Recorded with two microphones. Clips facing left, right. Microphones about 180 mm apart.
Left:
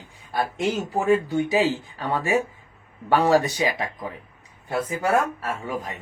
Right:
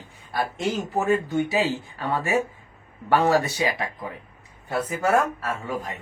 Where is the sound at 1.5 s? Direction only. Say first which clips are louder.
Left 3 dB; 15° left (ahead or behind).